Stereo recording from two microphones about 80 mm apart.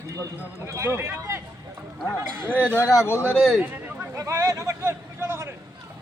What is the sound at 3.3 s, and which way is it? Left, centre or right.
Speech, centre.